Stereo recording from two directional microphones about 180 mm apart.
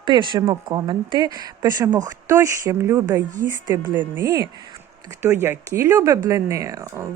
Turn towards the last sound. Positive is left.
turn(degrees=-20)  # may be behind; listen again after turning